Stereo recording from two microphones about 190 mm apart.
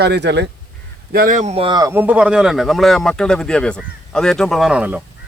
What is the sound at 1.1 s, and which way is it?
Speech, 45° right (ahead or behind).